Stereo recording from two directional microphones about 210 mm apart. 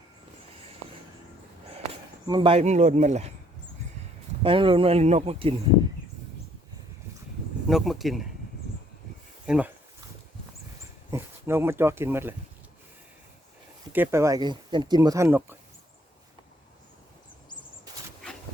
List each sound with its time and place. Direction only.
2.2 s speech: 20° right (ahead or behind)
4.4 s speech: 25° right (ahead or behind)
7.7 s speech: centre (ahead or behind)
9.5 s speech: 5° right (ahead or behind)
11.1 s speech: 10° right (ahead or behind)
13.9 s speech: 10° right (ahead or behind)